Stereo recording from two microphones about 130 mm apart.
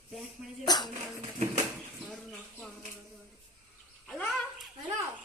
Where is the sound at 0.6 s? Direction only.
35° left (ahead or behind).